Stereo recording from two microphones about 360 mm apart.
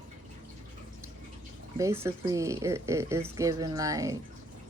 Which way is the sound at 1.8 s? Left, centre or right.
Centre.